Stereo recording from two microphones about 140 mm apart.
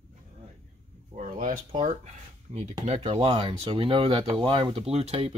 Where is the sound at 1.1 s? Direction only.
65° right (ahead or behind).